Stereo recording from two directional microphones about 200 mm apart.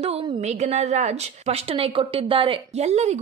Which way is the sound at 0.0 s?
30° right (ahead or behind).